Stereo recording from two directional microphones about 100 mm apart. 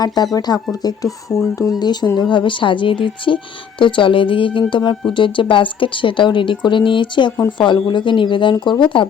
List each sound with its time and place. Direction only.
0.0 s speech: 40° left (ahead or behind)
1.3 s speech: 15° left (ahead or behind)
1.8 s speech: 45° left (ahead or behind)